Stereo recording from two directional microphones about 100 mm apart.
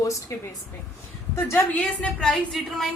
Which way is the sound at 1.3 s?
25° left (ahead or behind).